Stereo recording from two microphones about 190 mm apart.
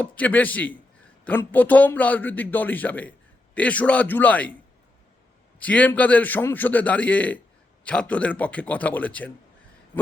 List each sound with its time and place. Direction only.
0.0 s a man's voice: 10° left (ahead or behind)
5.5 s a man's voice: 10° left (ahead or behind)